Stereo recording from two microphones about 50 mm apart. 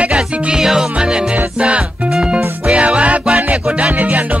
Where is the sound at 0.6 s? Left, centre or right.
Centre.